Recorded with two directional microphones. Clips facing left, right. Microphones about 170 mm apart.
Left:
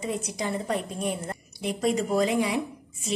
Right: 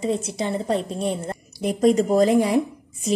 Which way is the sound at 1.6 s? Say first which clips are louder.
Right 8 dB; 40° right (ahead or behind).